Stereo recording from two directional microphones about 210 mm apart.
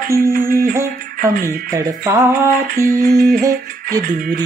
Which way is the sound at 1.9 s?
15° right (ahead or behind).